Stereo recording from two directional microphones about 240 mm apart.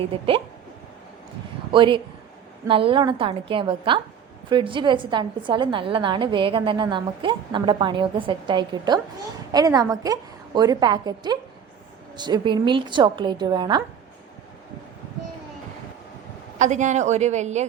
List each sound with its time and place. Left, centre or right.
0.1 s a woman's voice: right
1.7 s a woman's voice: right
16.6 s a woman's voice: right